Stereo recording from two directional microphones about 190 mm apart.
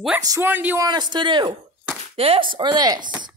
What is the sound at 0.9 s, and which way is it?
Speech, 20° right (ahead or behind).